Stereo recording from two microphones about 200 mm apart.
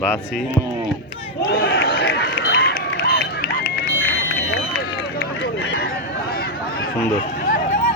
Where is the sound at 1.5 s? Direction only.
55° left (ahead or behind).